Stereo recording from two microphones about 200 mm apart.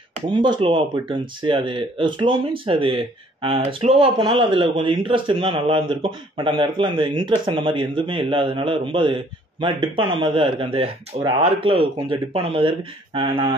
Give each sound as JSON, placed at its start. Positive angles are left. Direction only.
{"t": 0.3, "sound": "speech", "side_deg": -25}